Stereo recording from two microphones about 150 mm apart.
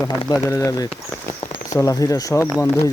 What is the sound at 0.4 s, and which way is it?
Speech, 20° left (ahead or behind).